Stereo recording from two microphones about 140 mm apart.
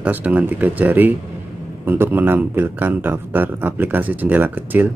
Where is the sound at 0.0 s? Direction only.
10° right (ahead or behind).